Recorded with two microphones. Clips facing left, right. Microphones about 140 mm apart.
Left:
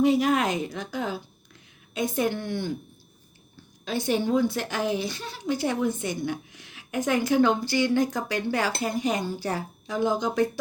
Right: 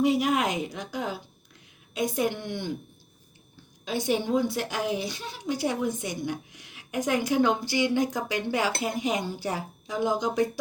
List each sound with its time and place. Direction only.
0.0 s a woman's voice: 10° right (ahead or behind)
3.8 s a woman's voice: 15° right (ahead or behind)